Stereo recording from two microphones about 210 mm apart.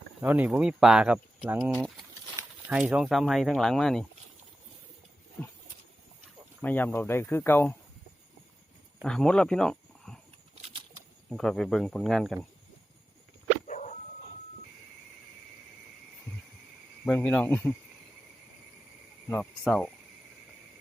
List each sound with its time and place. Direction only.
0.2 s speech: 10° right (ahead or behind)
6.6 s speech: 10° left (ahead or behind)
9.0 s speech: 5° left (ahead or behind)
10.6 s bird flight: 25° right (ahead or behind)
11.3 s speech: centre (ahead or behind)
13.7 s dog: 35° left (ahead or behind)
17.1 s speech: 5° left (ahead or behind)
19.3 s speech: 5° left (ahead or behind)